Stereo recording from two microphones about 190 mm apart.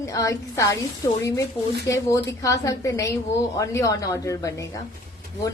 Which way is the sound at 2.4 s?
15° left (ahead or behind).